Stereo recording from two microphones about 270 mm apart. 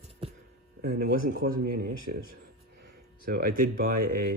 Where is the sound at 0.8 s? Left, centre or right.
Right.